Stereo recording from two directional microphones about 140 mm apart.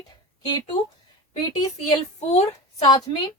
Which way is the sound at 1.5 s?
25° left (ahead or behind).